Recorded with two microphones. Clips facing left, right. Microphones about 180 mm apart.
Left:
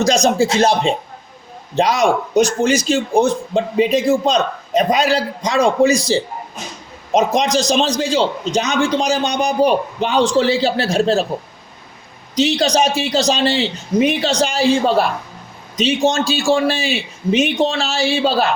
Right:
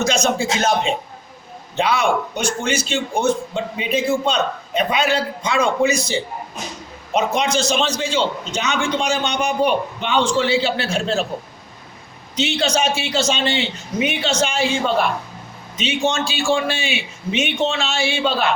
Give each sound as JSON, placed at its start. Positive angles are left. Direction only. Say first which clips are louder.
{"t": 0.0, "sound": "a man's voice", "louder": "left 5 dB", "side_deg": 35}
{"t": 12.4, "sound": "a man's voice", "louder": "left 5 dB", "side_deg": 35}